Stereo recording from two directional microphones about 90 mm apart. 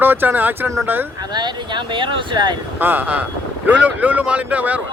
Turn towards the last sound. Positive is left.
turn(degrees=-15)  # may be behind; listen again after turning